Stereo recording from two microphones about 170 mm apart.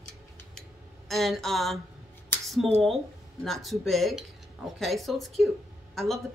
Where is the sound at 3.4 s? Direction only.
Centre (ahead or behind).